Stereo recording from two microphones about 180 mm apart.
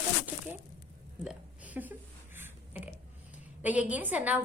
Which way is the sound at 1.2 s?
5° right (ahead or behind).